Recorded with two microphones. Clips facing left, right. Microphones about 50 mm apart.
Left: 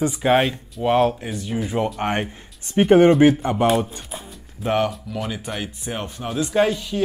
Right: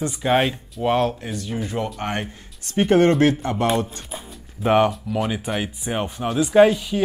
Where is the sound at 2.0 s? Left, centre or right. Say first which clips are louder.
Left 3 dB; left.